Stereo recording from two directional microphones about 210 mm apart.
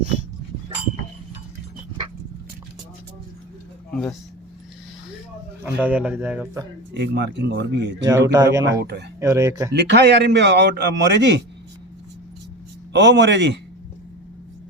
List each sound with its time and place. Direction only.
5.6 s a man's voice: 10° right (ahead or behind)
6.9 s a man's voice: 55° right (ahead or behind)
8.0 s a man's voice: 15° right (ahead or behind)
8.8 s speech: 50° right (ahead or behind)
9.2 s a man's voice: 15° right (ahead or behind)
9.7 s a man's voice: 55° right (ahead or behind)
12.9 s a man's voice: 55° right (ahead or behind)